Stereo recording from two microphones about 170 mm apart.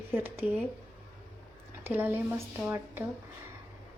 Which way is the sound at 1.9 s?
10° right (ahead or behind).